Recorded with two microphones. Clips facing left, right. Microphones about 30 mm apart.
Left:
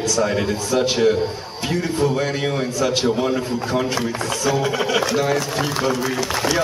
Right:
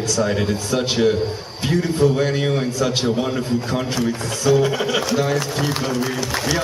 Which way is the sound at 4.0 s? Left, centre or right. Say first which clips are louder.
Even; centre.